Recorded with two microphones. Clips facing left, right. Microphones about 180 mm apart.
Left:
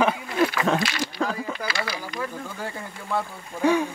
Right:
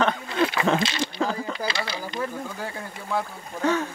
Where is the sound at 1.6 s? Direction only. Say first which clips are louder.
Right 1 dB; 25° right (ahead or behind).